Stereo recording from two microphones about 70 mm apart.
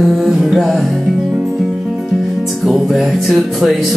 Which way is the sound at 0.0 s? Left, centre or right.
Centre.